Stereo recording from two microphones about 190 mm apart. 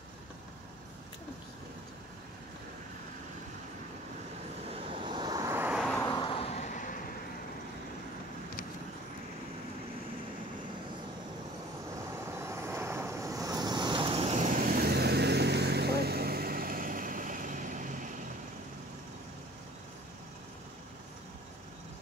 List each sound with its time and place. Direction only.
4.6 s vehicle: 30° right (ahead or behind); by 5.9 s 5° right (ahead or behind)
5.9 s a sound: 20° left (ahead or behind); by 7.0 s 40° left (ahead or behind)
12.3 s vehicle: 15° right (ahead or behind); by 18.2 s 40° right (ahead or behind)